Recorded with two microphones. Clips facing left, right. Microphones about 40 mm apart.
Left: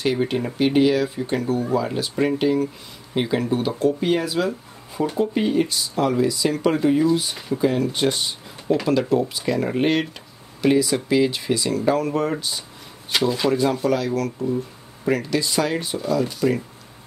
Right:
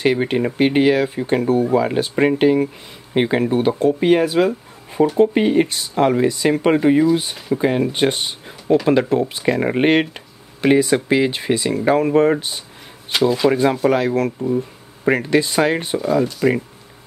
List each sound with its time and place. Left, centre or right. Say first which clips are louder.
0.0 s speech: right 4 dB; right
13.1 s speech: right 4 dB; centre
13.5 s speech: right 3 dB; right